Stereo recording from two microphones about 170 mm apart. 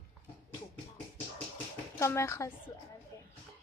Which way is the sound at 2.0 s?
15° left (ahead or behind).